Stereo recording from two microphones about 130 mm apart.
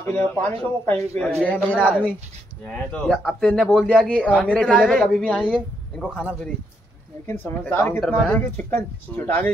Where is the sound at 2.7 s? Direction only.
10° left (ahead or behind).